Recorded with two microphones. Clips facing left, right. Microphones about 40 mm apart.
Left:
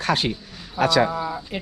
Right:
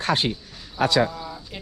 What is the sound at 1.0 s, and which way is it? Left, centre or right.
Speech, left.